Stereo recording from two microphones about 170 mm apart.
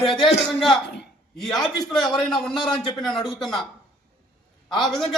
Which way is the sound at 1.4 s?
Centre (ahead or behind).